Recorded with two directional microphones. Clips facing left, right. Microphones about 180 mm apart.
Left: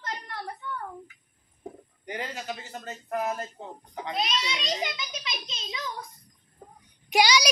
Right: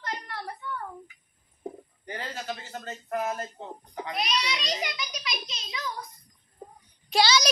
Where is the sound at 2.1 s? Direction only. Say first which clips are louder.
Left 1 dB; 15° left (ahead or behind).